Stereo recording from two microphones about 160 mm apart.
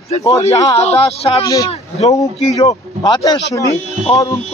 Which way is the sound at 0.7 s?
40° left (ahead or behind).